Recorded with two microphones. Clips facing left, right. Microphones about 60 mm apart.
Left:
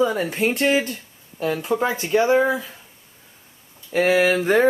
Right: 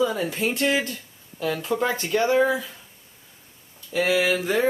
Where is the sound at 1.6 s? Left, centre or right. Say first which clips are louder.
Left 1 dB; centre.